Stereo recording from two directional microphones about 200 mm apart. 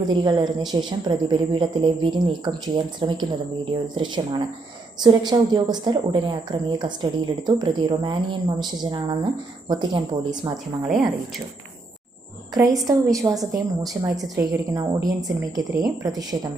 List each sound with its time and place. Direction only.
0.1 s a woman's voice: 20° right (ahead or behind)
10.8 s speech: centre (ahead or behind)
12.7 s a woman's voice: 15° right (ahead or behind)